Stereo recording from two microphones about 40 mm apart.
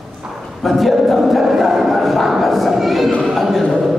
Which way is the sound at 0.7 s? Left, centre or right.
Centre.